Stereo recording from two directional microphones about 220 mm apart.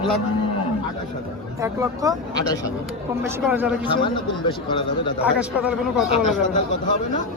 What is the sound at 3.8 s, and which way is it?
A man's voice, 20° left (ahead or behind).